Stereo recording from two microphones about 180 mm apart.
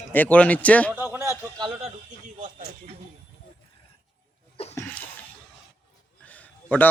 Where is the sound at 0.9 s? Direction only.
10° right (ahead or behind).